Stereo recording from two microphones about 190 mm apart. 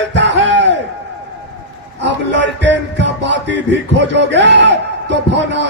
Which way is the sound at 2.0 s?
70° right (ahead or behind).